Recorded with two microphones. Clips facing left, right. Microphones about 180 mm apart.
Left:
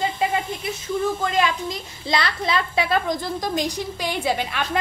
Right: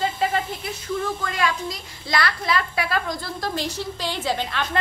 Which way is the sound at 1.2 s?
20° left (ahead or behind).